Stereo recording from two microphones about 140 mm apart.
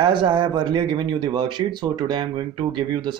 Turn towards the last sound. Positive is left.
turn(degrees=-35)  # may be behind; listen again after turning